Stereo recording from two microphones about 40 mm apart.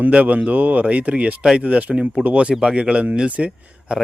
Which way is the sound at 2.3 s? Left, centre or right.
Right.